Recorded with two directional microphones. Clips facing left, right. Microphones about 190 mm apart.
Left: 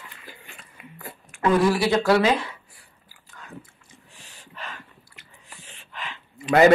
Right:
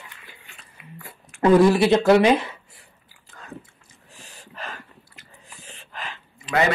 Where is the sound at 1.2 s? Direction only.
35° right (ahead or behind).